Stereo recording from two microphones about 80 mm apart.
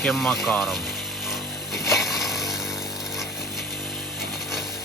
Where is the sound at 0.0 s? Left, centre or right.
Centre.